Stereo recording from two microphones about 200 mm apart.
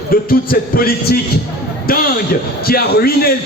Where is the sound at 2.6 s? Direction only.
50° left (ahead or behind).